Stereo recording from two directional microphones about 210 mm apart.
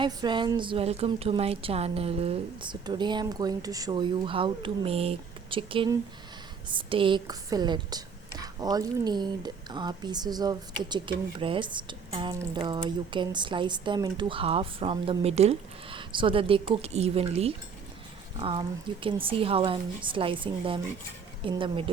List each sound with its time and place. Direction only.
0.0 s a woman's voice: 20° right (ahead or behind)